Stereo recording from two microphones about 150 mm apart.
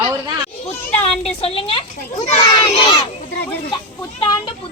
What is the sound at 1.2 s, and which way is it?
A child's voice, 40° left (ahead or behind).